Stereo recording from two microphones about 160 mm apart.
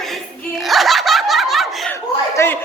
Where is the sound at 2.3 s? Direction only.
15° left (ahead or behind).